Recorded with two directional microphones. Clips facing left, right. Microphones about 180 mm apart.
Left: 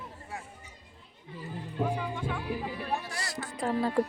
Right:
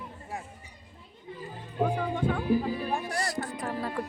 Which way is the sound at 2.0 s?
55° right (ahead or behind).